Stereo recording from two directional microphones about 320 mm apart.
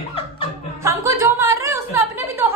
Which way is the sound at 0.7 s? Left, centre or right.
Centre.